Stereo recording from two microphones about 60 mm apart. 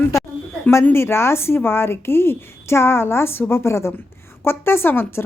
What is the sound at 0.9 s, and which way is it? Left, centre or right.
A woman's voice, left.